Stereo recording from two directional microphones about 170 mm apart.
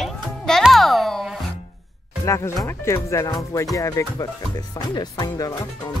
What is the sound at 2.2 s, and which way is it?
Speech, 15° left (ahead or behind).